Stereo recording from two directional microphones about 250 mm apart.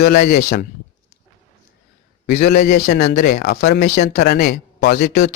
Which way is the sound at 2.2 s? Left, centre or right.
Left.